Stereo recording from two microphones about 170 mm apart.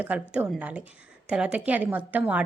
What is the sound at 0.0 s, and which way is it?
A woman's voice, 10° right (ahead or behind).